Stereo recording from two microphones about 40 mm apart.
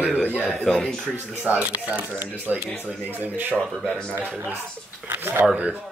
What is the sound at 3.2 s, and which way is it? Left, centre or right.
Speech, right.